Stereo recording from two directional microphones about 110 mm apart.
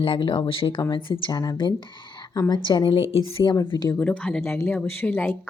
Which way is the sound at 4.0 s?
10° left (ahead or behind).